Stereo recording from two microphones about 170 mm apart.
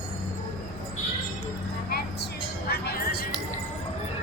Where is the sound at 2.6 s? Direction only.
65° left (ahead or behind).